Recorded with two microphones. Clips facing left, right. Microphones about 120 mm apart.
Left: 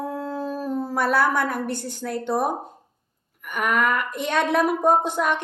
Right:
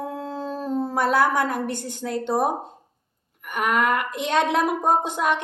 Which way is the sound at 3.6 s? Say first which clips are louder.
Right 1 dB; 20° right (ahead or behind).